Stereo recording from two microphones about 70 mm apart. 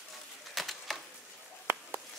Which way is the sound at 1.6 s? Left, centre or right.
Right.